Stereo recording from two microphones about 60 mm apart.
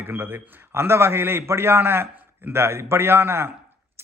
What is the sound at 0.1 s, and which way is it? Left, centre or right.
A man's voice, right.